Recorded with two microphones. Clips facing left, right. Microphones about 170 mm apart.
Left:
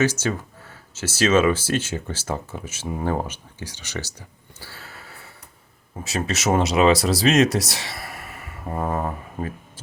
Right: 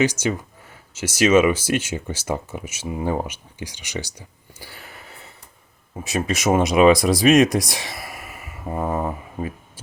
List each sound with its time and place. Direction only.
0.0 s speech: 15° right (ahead or behind)
4.6 s gasp: 15° right (ahead or behind)
6.0 s speech: 15° right (ahead or behind)